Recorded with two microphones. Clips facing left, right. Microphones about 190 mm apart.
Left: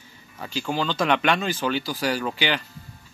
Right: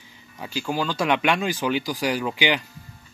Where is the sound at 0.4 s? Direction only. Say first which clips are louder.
Even; 10° right (ahead or behind).